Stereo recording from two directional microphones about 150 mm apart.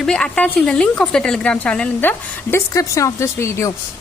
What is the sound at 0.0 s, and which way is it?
A woman's voice, 5° left (ahead or behind).